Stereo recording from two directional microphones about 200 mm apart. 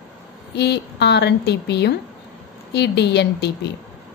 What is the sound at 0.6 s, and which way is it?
A woman's voice, 55° left (ahead or behind).